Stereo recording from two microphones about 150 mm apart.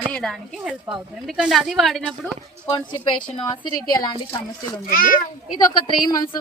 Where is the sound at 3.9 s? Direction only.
25° left (ahead or behind).